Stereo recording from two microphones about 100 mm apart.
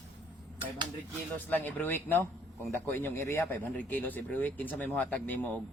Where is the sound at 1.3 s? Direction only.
20° left (ahead or behind).